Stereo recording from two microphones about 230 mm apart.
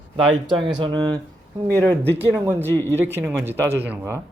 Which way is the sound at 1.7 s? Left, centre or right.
Centre.